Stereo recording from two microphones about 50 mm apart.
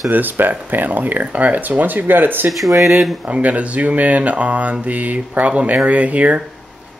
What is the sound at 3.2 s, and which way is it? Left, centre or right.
Speech, right.